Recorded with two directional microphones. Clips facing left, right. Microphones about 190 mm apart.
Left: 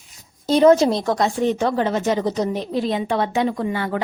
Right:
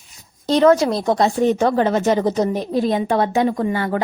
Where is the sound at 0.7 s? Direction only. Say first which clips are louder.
Left 1 dB; 25° left (ahead or behind).